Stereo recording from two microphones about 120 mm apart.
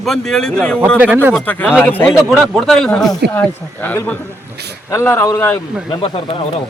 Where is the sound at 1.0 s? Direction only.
15° right (ahead or behind).